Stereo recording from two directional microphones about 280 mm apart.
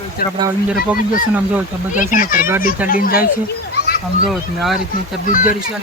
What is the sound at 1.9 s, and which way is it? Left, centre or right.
Speech, left.